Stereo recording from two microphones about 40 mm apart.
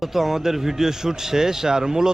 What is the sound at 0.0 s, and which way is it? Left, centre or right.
A man's voice, centre.